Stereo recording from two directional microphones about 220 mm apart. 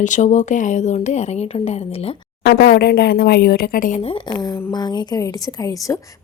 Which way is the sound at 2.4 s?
45° left (ahead or behind).